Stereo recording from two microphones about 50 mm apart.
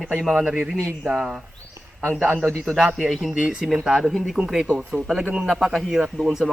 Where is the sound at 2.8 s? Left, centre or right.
Centre.